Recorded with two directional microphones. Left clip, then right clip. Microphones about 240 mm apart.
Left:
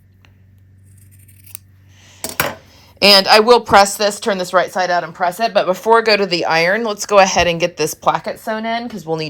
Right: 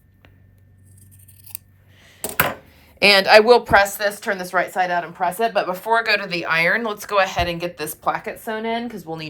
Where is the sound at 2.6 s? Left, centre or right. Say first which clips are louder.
Left 5 dB; centre.